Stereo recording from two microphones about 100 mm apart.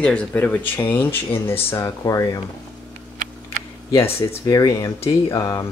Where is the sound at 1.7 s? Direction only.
35° left (ahead or behind).